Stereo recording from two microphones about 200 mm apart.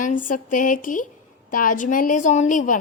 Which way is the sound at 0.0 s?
40° left (ahead or behind).